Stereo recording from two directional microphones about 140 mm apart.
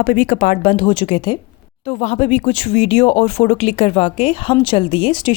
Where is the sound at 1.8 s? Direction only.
50° left (ahead or behind).